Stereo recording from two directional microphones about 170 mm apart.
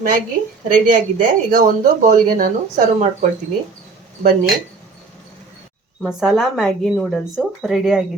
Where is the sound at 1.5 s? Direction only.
50° right (ahead or behind).